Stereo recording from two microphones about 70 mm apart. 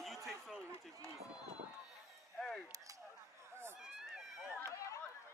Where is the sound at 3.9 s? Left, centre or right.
Centre.